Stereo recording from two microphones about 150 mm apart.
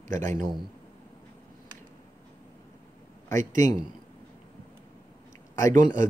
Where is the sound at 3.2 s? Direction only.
20° left (ahead or behind).